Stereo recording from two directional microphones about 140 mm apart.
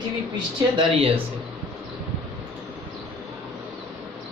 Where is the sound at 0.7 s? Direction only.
40° right (ahead or behind).